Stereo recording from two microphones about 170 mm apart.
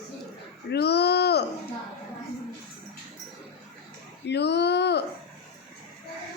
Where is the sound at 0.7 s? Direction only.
75° left (ahead or behind).